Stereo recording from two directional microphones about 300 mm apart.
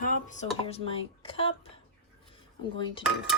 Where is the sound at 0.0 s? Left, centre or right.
Left.